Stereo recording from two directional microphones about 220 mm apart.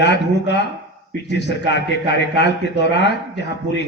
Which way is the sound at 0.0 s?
50° left (ahead or behind).